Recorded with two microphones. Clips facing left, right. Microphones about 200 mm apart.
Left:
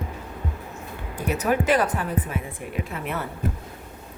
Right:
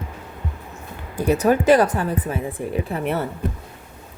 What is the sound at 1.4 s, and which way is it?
A woman's voice, 35° right (ahead or behind).